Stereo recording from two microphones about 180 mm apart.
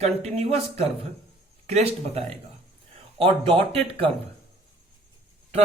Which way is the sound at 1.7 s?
35° right (ahead or behind).